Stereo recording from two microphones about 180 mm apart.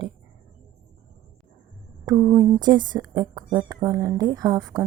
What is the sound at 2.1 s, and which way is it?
A woman's voice, 20° right (ahead or behind).